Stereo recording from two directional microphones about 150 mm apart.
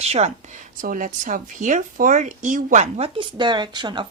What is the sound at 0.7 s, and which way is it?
Speech, 60° right (ahead or behind).